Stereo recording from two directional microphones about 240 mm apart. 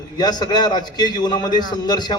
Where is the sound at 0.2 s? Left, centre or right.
Centre.